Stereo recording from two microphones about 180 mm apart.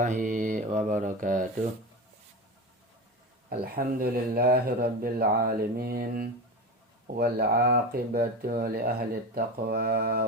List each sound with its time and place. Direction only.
0.0 s mantra: 45° right (ahead or behind)
3.6 s speech: 60° right (ahead or behind)